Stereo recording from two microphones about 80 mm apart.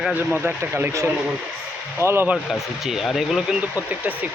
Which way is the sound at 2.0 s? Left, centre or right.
Right.